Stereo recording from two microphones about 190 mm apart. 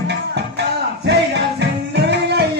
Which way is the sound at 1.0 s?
65° right (ahead or behind).